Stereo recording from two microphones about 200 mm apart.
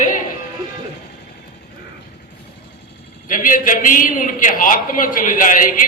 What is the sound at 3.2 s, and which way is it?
A man's voice, 45° left (ahead or behind).